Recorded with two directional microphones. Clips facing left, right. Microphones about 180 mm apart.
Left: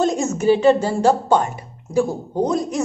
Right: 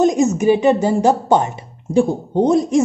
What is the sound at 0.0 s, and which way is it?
A woman's voice, 15° right (ahead or behind).